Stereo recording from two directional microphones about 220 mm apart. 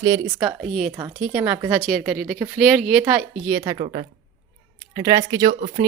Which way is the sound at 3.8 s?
30° right (ahead or behind).